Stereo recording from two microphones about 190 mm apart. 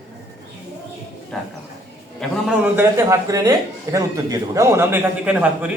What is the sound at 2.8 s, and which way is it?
A man's voice, 15° right (ahead or behind).